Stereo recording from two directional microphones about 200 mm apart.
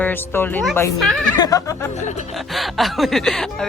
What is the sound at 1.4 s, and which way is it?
Speech, 15° left (ahead or behind).